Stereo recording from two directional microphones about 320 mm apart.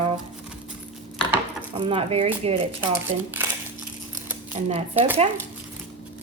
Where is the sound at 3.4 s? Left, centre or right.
Centre.